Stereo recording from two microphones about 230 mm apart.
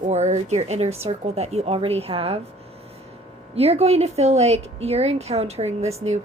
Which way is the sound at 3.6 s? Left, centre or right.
Right.